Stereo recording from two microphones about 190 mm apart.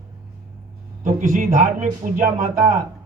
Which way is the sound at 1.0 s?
40° right (ahead or behind).